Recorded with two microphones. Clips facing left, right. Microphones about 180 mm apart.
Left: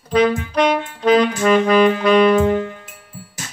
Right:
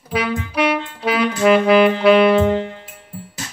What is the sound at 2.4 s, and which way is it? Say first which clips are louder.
Music: even; 25° right (ahead or behind).